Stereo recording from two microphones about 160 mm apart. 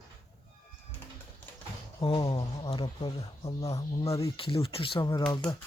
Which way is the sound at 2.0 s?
30° left (ahead or behind).